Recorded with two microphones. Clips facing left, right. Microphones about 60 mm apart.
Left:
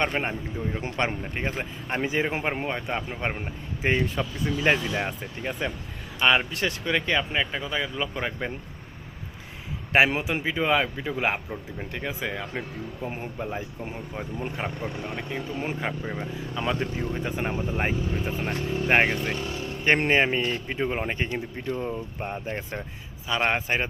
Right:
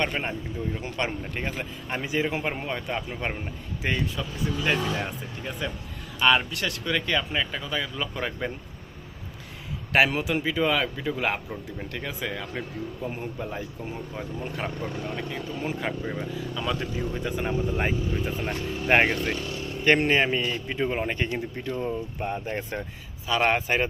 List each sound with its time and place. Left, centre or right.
0.0 s speech: left
1.2 s speech: centre
2.0 s speech: left; by 8.5 s centre
9.9 s speech: left
17.7 s speech: centre
18.4 s speech: centre
20.0 s speech: left
20.8 s speech: centre